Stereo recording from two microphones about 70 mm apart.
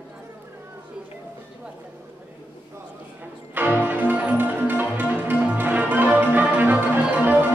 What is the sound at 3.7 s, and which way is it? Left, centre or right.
Music, right.